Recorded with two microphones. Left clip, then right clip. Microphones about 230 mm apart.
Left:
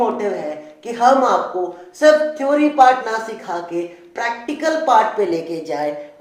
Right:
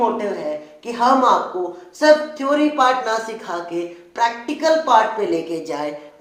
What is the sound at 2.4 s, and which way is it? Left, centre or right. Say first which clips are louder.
Speech: left 4 dB; centre.